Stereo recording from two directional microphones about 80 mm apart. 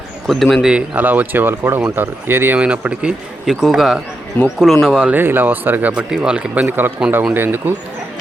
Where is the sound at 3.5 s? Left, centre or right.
Centre.